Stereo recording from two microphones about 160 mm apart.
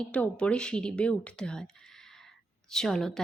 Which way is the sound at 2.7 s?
5° left (ahead or behind).